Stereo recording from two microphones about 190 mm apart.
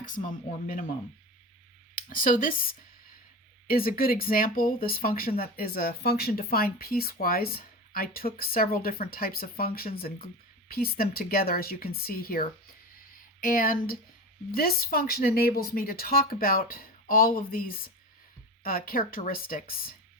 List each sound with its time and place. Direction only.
0.0 s speech: 45° left (ahead or behind)
2.0 s speech: 45° left (ahead or behind)